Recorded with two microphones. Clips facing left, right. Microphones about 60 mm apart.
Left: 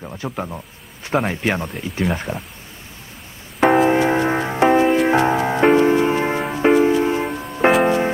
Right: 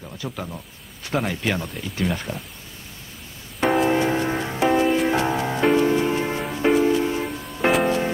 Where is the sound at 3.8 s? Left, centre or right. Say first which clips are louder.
Left 4 dB; left.